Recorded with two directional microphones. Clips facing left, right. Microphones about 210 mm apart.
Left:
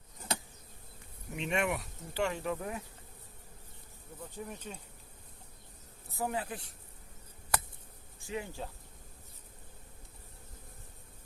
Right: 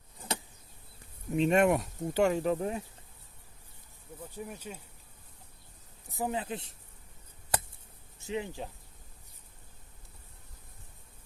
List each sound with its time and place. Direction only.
1.4 s speech: 40° right (ahead or behind)
4.2 s speech: 10° right (ahead or behind)
6.1 s speech: 20° right (ahead or behind)
8.2 s speech: 20° right (ahead or behind)